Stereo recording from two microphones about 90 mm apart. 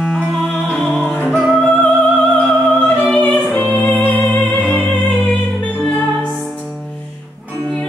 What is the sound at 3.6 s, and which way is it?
Music, 20° left (ahead or behind).